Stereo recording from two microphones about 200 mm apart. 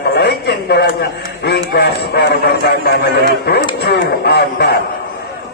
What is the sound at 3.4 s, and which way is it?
A man's voice, 55° left (ahead or behind).